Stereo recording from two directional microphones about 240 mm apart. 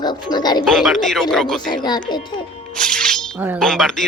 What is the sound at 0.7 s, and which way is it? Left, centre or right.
Speech, centre.